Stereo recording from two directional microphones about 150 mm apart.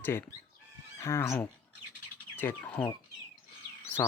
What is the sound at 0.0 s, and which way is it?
Speech, 15° left (ahead or behind).